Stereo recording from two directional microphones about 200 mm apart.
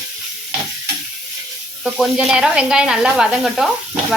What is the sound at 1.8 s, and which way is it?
Speech, 5° right (ahead or behind).